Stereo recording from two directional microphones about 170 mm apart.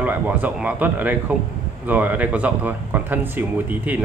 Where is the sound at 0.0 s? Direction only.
10° right (ahead or behind).